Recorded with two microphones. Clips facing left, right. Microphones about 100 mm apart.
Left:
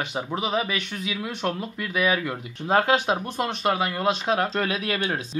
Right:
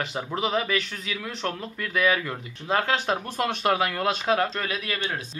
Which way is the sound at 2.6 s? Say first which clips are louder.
Left 4 dB; 35° left (ahead or behind).